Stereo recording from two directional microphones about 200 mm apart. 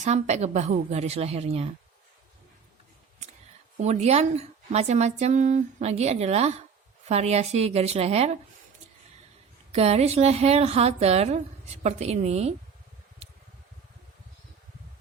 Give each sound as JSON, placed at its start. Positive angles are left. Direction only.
{"t": 0.0, "sound": "a woman's voice", "side_deg": -35}
{"t": 3.8, "sound": "a woman's voice", "side_deg": -35}
{"t": 9.7, "sound": "a woman's voice", "side_deg": -30}